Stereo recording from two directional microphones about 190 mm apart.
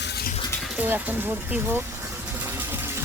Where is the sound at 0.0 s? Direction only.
55° left (ahead or behind).